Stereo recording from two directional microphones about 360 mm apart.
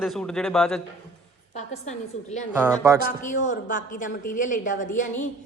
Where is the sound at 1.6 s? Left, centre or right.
Centre.